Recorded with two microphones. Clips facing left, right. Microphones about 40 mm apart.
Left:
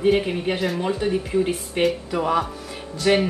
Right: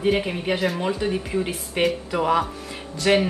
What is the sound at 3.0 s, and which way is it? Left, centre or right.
Speech, right.